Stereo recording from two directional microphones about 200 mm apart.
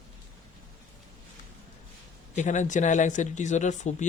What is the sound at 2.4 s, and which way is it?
Speech, 35° left (ahead or behind).